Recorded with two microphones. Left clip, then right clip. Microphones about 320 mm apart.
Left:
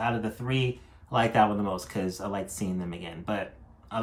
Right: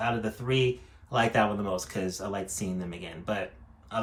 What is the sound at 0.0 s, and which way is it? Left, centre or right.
Speech, centre.